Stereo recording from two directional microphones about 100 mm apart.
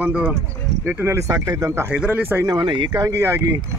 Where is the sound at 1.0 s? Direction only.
30° right (ahead or behind).